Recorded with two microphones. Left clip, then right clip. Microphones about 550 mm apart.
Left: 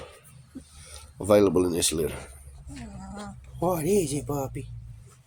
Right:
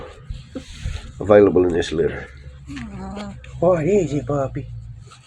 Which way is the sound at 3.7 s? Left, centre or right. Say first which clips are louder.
Right 8 dB; left.